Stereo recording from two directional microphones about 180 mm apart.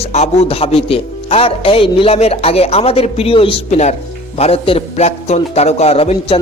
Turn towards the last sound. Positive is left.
turn(degrees=35)  # may be behind; listen again after turning